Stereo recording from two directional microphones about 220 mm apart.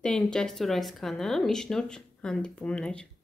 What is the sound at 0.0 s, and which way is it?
Speech, 5° left (ahead or behind).